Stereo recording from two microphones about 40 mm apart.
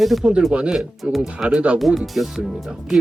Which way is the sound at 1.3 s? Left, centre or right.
Right.